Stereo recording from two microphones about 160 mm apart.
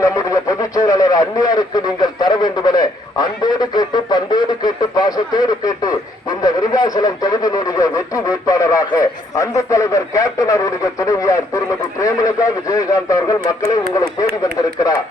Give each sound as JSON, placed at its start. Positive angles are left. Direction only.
{"t": 0.0, "sound": "speech", "side_deg": 20}